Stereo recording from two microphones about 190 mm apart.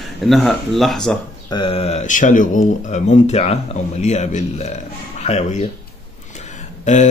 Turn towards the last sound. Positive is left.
turn(degrees=40)  # may be behind; listen again after turning